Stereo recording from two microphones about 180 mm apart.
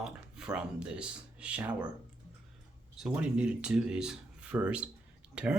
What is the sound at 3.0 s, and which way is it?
Speech, 5° right (ahead or behind).